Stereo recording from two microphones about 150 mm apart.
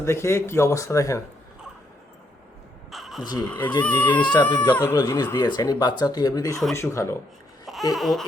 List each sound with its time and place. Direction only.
0.0 s speech: 15° left (ahead or behind)
2.9 s crow: centre (ahead or behind)
3.4 s speech: 10° left (ahead or behind)
3.9 s speech: 30° left (ahead or behind)
4.7 s speech: 15° left (ahead or behind)
7.9 s a sound: centre (ahead or behind)